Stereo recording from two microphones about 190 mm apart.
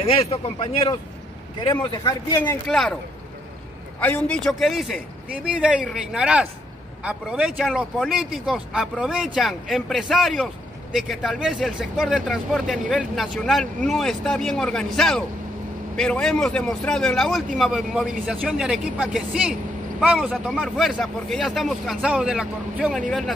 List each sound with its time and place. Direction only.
0.0 s speech: 30° left (ahead or behind)
4.0 s speech: 5° left (ahead or behind)